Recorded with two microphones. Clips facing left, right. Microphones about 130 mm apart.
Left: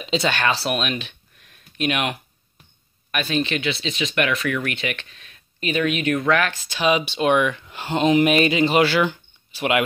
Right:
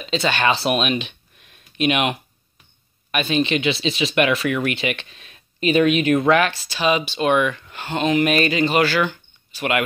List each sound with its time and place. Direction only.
0.0 s speech: 10° left (ahead or behind)
0.7 s speech: 15° right (ahead or behind)
6.8 s speech: 10° left (ahead or behind)